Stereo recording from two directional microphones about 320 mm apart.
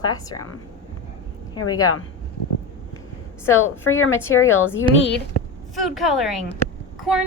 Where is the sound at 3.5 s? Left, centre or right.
Left.